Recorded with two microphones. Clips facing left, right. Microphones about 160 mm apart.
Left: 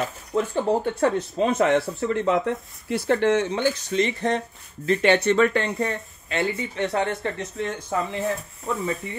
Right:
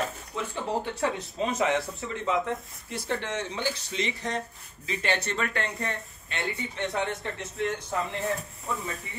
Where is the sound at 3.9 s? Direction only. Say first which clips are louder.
Left 9 dB; 50° left (ahead or behind).